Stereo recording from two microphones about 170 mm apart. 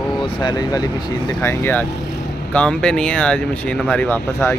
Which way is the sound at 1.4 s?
15° left (ahead or behind).